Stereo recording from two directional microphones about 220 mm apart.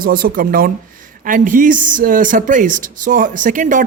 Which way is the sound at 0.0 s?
40° right (ahead or behind).